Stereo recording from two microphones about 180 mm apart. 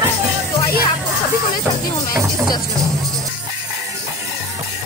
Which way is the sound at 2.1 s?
15° right (ahead or behind).